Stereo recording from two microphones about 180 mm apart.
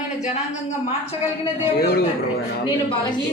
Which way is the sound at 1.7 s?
60° left (ahead or behind).